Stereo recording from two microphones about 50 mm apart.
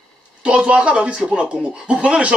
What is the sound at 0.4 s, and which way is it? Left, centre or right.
Speech, right.